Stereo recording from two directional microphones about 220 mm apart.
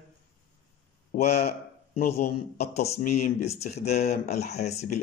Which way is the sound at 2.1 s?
30° left (ahead or behind).